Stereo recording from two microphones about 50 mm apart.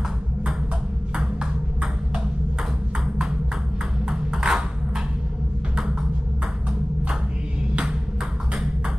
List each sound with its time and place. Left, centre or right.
1.1 s ping: centre
4.1 s ping: centre